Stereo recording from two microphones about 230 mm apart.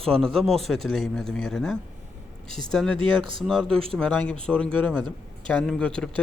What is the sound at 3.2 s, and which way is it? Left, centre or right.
Speech, right.